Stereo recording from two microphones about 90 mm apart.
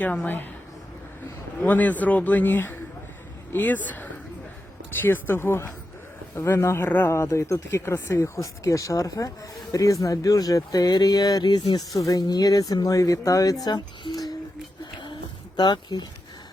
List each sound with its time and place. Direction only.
0.0 s speech: 15° left (ahead or behind)
1.6 s speech: 20° left (ahead or behind)
7.1 s speech: 35° left (ahead or behind); by 14.3 s 50° left (ahead or behind)
15.5 s speech: 50° left (ahead or behind)